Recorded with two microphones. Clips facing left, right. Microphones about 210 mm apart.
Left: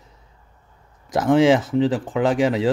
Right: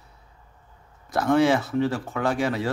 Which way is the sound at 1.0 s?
15° left (ahead or behind).